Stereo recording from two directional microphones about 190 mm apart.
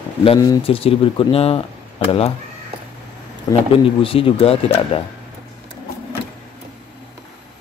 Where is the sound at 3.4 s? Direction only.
30° left (ahead or behind).